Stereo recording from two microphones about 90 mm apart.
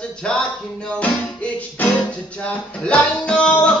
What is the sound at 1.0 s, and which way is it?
Music, 15° left (ahead or behind).